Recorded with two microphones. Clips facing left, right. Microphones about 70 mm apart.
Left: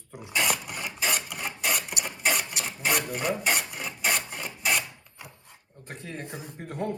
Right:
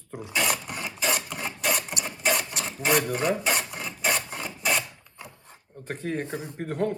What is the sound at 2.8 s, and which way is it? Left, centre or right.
Speech, right.